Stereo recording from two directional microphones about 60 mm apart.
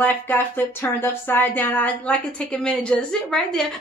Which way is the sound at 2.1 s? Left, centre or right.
Centre.